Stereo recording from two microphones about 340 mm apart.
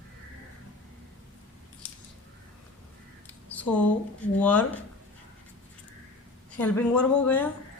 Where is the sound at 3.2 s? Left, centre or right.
Centre.